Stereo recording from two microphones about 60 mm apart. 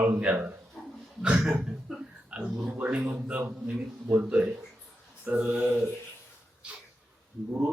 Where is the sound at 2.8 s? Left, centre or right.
Right.